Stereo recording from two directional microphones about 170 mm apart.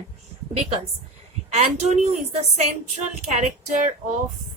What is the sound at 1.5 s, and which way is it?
A woman's voice, 40° right (ahead or behind).